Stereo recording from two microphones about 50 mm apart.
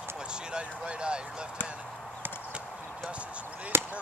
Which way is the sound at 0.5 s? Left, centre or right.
Right.